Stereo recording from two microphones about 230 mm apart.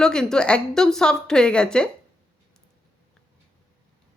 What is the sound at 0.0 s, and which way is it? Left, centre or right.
A woman's voice, centre.